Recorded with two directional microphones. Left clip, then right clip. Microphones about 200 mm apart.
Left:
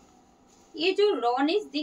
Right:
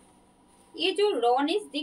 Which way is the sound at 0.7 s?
15° left (ahead or behind).